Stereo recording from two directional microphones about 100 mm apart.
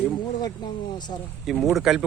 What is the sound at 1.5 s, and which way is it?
Speech, centre (ahead or behind).